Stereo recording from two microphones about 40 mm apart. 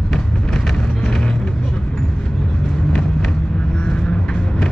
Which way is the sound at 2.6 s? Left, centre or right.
Centre.